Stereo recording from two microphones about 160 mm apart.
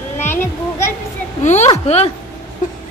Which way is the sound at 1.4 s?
45° left (ahead or behind).